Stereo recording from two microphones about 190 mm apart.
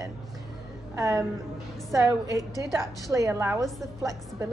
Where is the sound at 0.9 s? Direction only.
15° right (ahead or behind).